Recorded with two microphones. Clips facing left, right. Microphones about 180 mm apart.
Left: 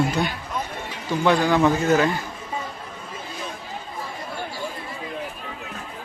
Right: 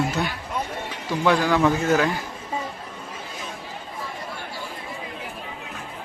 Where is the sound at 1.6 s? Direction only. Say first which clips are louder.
Left 1 dB; 5° left (ahead or behind).